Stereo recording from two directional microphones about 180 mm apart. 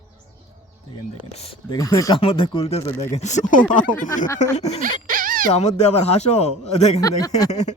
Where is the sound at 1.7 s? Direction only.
20° left (ahead or behind).